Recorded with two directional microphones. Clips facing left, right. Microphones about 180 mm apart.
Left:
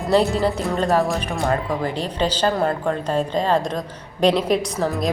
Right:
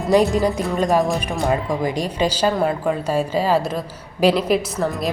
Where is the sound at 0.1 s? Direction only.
15° right (ahead or behind).